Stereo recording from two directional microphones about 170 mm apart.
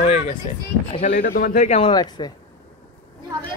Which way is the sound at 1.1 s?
65° left (ahead or behind).